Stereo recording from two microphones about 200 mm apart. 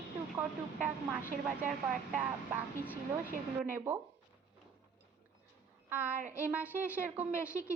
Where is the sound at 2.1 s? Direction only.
10° right (ahead or behind).